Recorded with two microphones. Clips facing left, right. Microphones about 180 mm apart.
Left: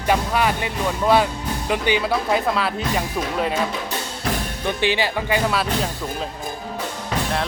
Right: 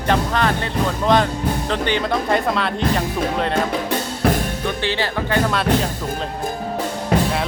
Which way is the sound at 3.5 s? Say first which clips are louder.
Right 4 dB; 60° right (ahead or behind).